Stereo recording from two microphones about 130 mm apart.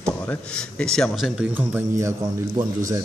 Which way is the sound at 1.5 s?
15° right (ahead or behind).